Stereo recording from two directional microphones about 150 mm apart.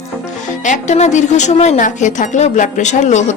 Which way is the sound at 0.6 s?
55° left (ahead or behind).